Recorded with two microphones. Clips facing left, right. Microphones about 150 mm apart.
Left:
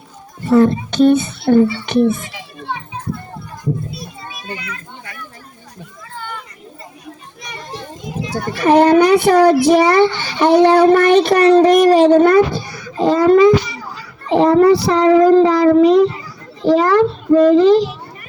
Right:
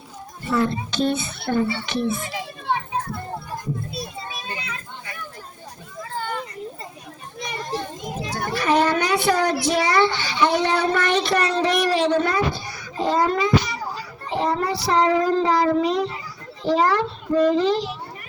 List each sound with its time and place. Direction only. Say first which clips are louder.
0.4 s a child's voice: left 10 dB; 50° left (ahead or behind)
3.9 s children playing: even; 30° right (ahead or behind)
6.1 s children playing: right 2 dB; 35° right (ahead or behind)
8.5 s a child's voice: left 10 dB; 55° left (ahead or behind)
14.3 s child singing: left 13 dB; 70° left (ahead or behind)
16.6 s a child's voice: left 8 dB; 60° left (ahead or behind)